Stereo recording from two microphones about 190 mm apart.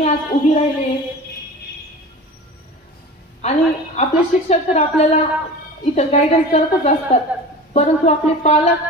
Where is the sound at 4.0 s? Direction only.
35° left (ahead or behind).